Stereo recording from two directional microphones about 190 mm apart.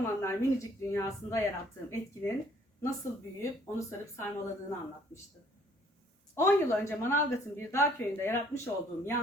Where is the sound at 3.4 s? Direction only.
15° left (ahead or behind).